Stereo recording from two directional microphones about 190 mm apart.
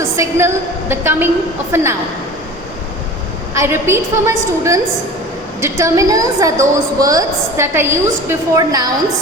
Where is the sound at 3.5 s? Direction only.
15° right (ahead or behind).